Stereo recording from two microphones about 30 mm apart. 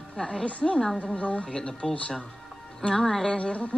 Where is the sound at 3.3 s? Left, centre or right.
Left.